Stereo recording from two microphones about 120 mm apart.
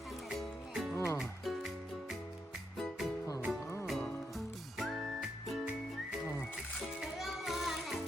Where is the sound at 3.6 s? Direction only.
20° left (ahead or behind).